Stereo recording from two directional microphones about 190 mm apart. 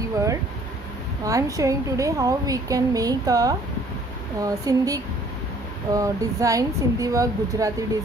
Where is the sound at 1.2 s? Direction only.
15° right (ahead or behind).